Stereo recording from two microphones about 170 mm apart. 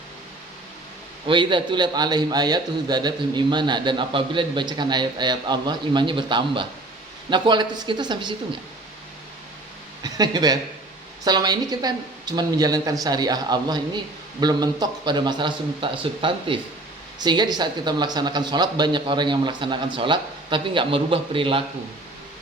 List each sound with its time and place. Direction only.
1.3 s a man's voice: 30° right (ahead or behind)
10.0 s a man's voice: 25° right (ahead or behind)